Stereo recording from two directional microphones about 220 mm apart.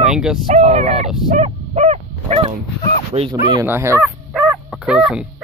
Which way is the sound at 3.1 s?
25° right (ahead or behind).